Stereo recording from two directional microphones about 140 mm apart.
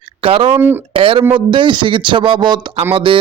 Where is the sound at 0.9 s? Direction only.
40° right (ahead or behind).